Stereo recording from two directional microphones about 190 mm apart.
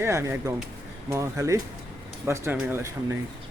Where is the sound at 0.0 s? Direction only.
15° right (ahead or behind).